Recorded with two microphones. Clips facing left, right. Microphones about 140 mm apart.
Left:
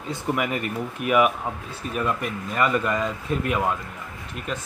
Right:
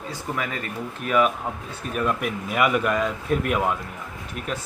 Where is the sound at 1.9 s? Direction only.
Centre (ahead or behind).